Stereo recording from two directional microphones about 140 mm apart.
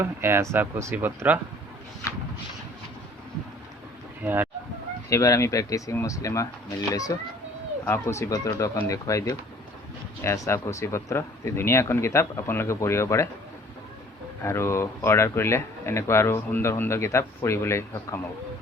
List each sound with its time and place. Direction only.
0.0 s speech: 15° right (ahead or behind)
4.2 s speech: 15° right (ahead or behind)
5.0 s speech: 20° left (ahead or behind)
14.4 s speech: 20° left (ahead or behind)